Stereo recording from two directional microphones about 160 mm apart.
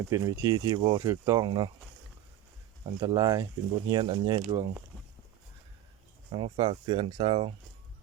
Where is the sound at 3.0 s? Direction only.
25° right (ahead or behind).